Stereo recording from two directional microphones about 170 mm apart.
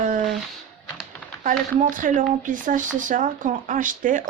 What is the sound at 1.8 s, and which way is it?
Speech, 50° right (ahead or behind).